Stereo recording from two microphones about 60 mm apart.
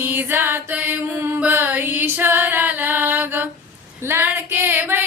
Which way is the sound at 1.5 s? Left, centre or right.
Right.